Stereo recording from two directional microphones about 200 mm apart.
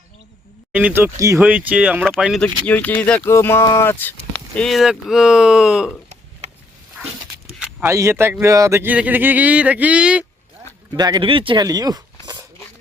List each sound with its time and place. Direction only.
0.7 s speech: 10° right (ahead or behind)
7.6 s speech: 10° right (ahead or behind)
10.9 s speech: 20° right (ahead or behind)
12.2 s a sound: 20° right (ahead or behind)